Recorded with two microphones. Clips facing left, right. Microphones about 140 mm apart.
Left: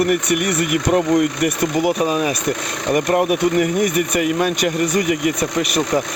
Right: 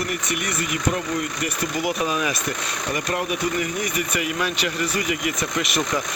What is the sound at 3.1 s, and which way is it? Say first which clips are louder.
Speech: left 8 dB; 55° left (ahead or behind).